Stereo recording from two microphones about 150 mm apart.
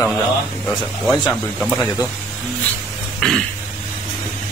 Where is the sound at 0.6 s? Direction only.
Centre (ahead or behind).